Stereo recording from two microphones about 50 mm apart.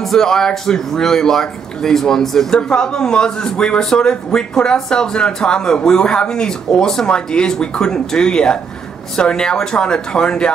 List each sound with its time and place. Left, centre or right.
0.0 s speech: centre